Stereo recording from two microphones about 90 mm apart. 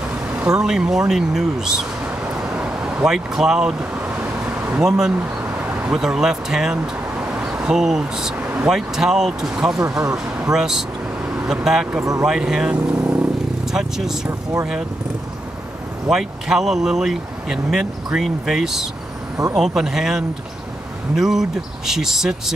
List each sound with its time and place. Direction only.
0.4 s speech: 10° right (ahead or behind)
2.4 s a sound: 10° right (ahead or behind)
4.6 s speech: 5° right (ahead or behind)
5.7 s vehicle: 15° right (ahead or behind)
5.9 s speech: 5° right (ahead or behind)
7.2 s a sound: 15° right (ahead or behind)
8.6 s speech: 5° right (ahead or behind)
12.0 s speech: 35° right (ahead or behind)
12.3 s speech: 10° right (ahead or behind)
16.1 s speech: 5° right (ahead or behind)